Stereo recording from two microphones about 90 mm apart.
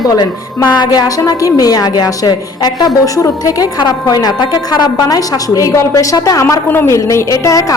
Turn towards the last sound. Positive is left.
turn(degrees=40)  # may be behind; listen again after turning